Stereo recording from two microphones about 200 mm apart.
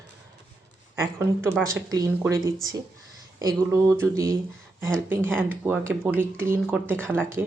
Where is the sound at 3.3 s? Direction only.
15° right (ahead or behind).